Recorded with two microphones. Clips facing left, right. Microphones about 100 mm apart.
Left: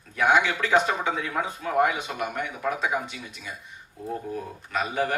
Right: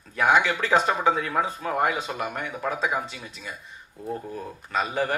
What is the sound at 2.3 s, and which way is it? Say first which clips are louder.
Speech: left 1 dB; 35° right (ahead or behind).